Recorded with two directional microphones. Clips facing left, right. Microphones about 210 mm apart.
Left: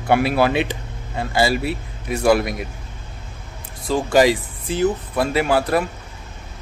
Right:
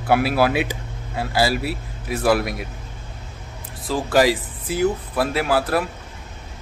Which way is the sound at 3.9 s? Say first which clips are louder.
Left 2 dB; centre (ahead or behind).